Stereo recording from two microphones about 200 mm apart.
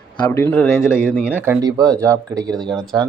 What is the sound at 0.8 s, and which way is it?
Speech, 5° right (ahead or behind).